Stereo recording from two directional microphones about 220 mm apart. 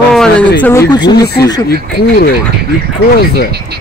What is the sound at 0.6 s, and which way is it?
Speech, 15° left (ahead or behind).